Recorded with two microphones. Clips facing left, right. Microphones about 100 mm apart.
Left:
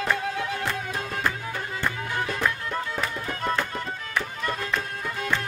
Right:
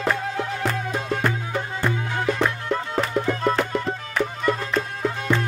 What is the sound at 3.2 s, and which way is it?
Music, 30° right (ahead or behind).